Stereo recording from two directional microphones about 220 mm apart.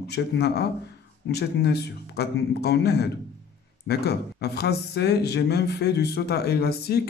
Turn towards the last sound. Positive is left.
turn(degrees=45)  # may be behind; listen again after turning